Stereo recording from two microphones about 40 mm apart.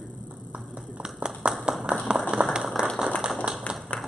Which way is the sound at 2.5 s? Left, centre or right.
Centre.